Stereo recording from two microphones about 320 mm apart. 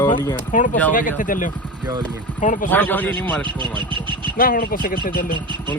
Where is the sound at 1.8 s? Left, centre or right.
Centre.